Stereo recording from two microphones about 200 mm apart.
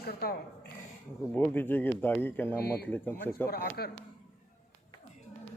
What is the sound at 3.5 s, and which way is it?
Speech, 50° left (ahead or behind).